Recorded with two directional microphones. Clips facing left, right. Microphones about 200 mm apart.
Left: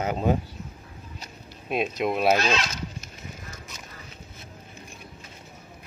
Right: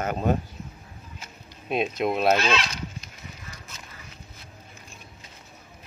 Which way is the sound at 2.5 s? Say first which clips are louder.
Right 1 dB; 45° left (ahead or behind).